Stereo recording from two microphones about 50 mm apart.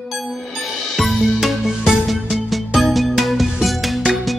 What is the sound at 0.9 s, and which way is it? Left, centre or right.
Music, centre.